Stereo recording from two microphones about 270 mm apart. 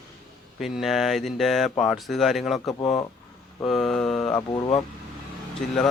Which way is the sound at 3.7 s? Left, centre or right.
Centre.